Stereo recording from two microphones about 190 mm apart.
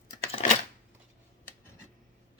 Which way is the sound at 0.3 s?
30° left (ahead or behind).